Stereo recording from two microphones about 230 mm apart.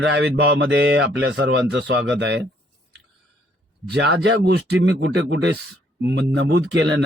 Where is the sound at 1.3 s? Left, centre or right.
Right.